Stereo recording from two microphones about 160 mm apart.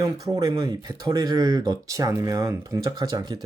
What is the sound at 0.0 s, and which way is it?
Speech, 20° right (ahead or behind).